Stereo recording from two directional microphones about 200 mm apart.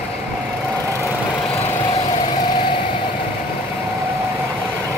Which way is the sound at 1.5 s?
20° left (ahead or behind).